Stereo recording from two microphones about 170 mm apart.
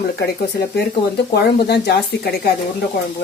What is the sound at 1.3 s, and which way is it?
Speech, 70° left (ahead or behind).